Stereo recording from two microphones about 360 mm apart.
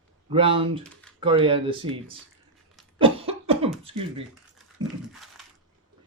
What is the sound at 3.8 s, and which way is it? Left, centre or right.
Speech, centre.